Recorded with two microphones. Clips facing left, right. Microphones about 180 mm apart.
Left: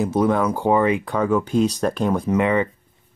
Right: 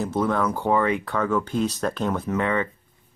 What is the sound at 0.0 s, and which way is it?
Speech, 15° left (ahead or behind).